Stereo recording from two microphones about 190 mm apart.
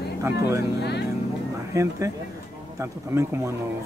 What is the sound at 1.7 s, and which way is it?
Speech, 15° right (ahead or behind).